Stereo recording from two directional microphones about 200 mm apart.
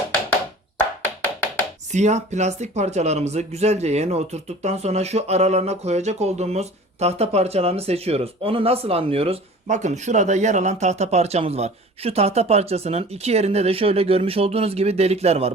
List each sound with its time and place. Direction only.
1.9 s speech: 35° right (ahead or behind)